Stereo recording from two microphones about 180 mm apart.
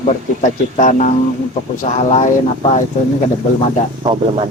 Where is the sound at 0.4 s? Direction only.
45° left (ahead or behind).